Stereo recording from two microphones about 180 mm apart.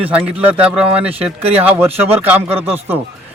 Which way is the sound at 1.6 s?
10° right (ahead or behind).